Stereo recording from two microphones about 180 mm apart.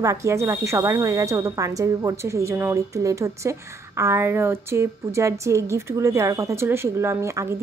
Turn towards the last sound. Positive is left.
turn(degrees=-15)  # may be behind; listen again after turning